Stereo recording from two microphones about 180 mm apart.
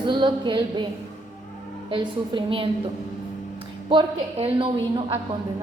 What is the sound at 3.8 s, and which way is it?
A woman's voice, 30° right (ahead or behind).